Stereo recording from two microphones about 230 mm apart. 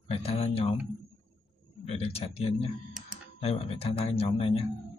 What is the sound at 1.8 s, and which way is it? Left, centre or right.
Speech, left.